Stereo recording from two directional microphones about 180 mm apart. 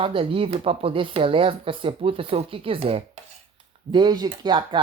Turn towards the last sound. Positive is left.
turn(degrees=-25)  # may be behind; listen again after turning